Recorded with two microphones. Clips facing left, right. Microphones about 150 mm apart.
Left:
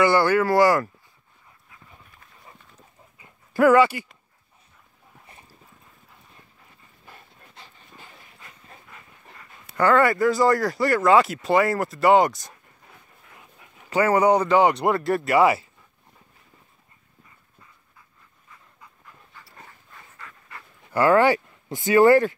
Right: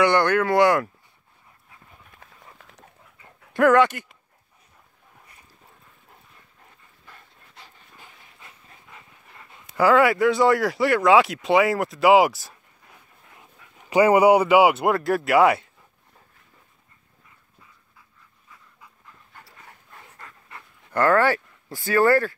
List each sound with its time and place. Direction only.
0.0 s speech: 5° left (ahead or behind)
2.1 s dog: 80° right
3.5 s speech: 5° left (ahead or behind)
7.5 s dog: 5° right (ahead or behind)
9.8 s speech: 5° right (ahead or behind)
13.8 s speech: 15° right (ahead or behind); by 15.7 s centre (ahead or behind)
20.9 s speech: 10° left (ahead or behind)